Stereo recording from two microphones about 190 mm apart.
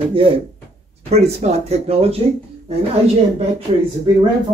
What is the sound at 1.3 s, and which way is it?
Speech, 35° right (ahead or behind).